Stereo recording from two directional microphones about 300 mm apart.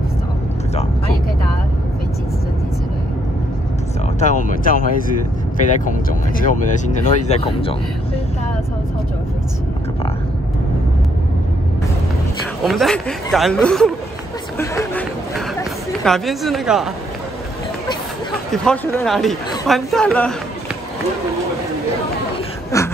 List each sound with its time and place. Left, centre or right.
4.2 s speech: left
5.9 s speech: left
12.6 s speech: centre
18.5 s speech: centre
22.7 s a sound: centre